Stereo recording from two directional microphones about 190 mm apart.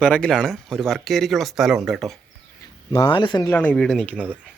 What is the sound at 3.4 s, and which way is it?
Speech, 10° left (ahead or behind).